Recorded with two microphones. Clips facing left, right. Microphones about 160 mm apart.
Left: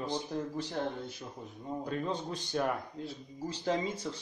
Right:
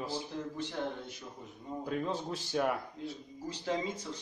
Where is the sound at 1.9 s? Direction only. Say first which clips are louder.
Right 1 dB; 5° right (ahead or behind).